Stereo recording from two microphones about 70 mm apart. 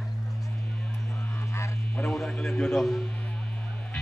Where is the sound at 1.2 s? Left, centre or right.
Left.